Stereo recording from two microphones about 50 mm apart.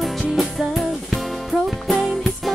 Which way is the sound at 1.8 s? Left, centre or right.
Centre.